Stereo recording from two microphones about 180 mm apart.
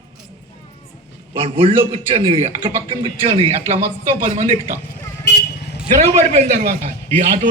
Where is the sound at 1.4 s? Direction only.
30° right (ahead or behind).